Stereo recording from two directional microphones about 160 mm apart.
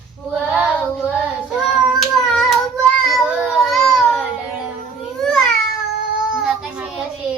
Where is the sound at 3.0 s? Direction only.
Centre (ahead or behind).